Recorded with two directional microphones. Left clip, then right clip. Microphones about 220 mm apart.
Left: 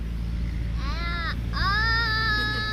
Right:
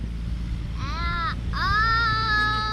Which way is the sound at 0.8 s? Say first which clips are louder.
Right 4 dB; 15° right (ahead or behind).